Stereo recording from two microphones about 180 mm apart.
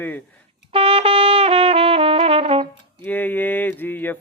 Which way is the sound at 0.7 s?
30° right (ahead or behind).